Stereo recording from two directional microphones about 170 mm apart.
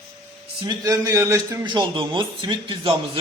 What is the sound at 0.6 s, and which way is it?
A man's voice, 25° right (ahead or behind).